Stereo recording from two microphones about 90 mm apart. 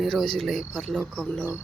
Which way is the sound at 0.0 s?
5° left (ahead or behind).